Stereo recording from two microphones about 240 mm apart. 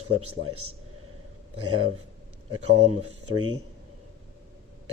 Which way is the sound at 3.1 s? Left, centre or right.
Centre.